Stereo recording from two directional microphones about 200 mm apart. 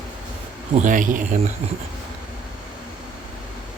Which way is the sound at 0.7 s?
40° right (ahead or behind).